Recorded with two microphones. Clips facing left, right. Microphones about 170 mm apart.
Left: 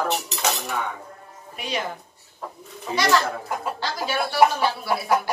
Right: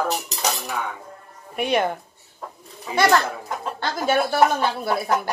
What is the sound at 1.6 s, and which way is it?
Speech, 55° right (ahead or behind).